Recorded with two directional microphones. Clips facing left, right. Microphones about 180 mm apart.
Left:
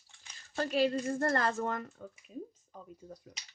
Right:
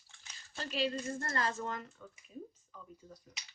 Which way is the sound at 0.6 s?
50° left (ahead or behind).